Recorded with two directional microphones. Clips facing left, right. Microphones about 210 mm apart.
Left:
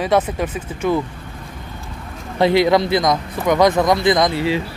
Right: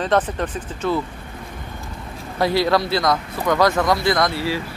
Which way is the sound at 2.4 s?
20° left (ahead or behind).